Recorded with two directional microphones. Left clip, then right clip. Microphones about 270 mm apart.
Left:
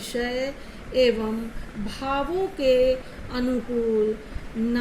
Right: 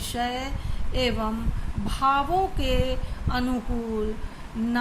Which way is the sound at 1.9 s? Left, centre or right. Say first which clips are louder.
Right 4 dB; centre.